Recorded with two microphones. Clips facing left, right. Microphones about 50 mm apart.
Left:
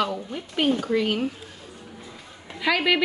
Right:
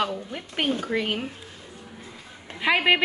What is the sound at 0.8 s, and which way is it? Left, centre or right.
Speech, centre.